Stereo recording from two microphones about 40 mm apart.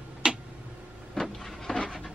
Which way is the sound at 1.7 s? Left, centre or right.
Centre.